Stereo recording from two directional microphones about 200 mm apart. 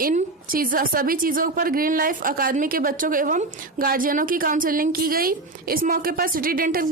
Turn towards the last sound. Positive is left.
turn(degrees=-45)  # may be behind; listen again after turning